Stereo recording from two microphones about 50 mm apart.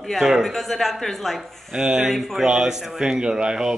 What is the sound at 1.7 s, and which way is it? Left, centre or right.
Speech, centre.